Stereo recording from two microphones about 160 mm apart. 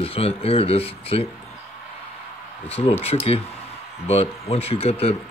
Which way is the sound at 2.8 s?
40° left (ahead or behind).